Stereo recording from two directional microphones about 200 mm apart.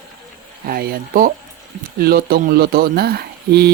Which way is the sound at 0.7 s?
45° right (ahead or behind).